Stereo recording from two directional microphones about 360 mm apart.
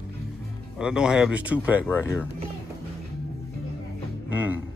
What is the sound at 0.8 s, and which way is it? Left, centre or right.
Speech, centre.